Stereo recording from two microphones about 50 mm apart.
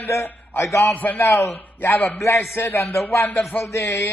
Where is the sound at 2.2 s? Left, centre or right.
Left.